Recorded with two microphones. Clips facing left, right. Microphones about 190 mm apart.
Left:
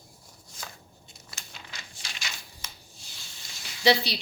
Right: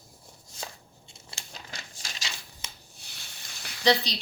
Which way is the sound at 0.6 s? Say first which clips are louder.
Right 3 dB; 25° right (ahead or behind).